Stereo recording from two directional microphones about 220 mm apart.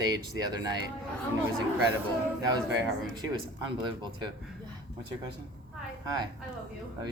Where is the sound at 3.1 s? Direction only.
20° right (ahead or behind).